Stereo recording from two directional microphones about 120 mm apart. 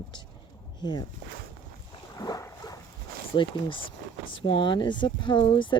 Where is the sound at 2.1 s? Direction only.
30° left (ahead or behind).